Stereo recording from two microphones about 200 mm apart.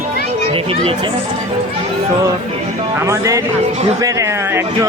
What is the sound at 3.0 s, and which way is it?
Speech, 15° right (ahead or behind).